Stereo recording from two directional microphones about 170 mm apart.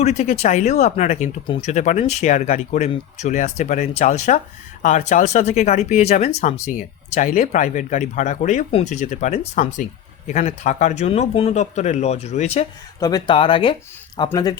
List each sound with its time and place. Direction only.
0.0 s speech: 40° left (ahead or behind)
1.5 s speech: 30° left (ahead or behind)
1.7 s speech: 45° left (ahead or behind)
13.0 s speech: 20° left (ahead or behind)